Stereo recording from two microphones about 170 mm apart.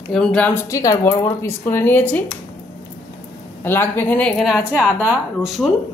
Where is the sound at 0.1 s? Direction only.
5° left (ahead or behind).